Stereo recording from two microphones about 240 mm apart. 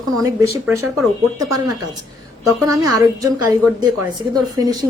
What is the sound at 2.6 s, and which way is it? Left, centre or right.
Speech, centre.